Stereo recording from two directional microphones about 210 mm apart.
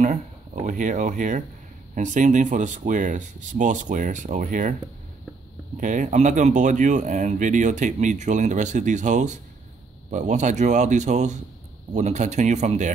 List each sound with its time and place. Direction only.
0.7 s speech: 35° right (ahead or behind)
5.8 s speech: 35° right (ahead or behind)